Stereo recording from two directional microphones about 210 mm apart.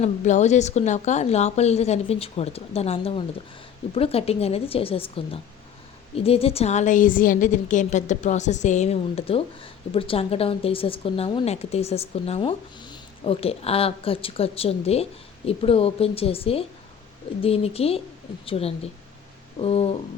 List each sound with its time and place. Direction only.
0.0 s a woman's voice: 35° left (ahead or behind)